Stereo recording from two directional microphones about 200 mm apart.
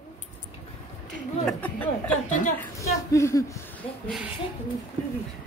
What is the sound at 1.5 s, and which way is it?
A woman's voice, 10° left (ahead or behind).